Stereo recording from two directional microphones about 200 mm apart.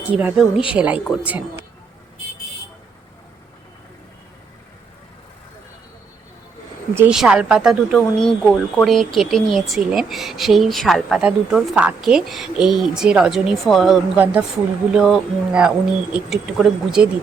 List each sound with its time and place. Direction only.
0.1 s speech: 5° right (ahead or behind)
6.9 s speech: 5° right (ahead or behind)